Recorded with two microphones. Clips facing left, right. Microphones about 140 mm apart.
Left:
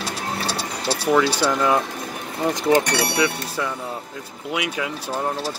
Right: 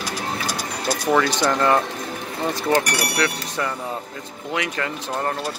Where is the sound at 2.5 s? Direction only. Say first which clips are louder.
Left 3 dB; 20° left (ahead or behind).